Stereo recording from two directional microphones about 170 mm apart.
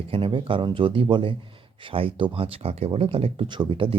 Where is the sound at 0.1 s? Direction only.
30° right (ahead or behind).